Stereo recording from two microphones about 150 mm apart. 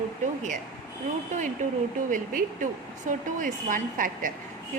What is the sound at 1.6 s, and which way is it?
A woman's voice, 55° right (ahead or behind).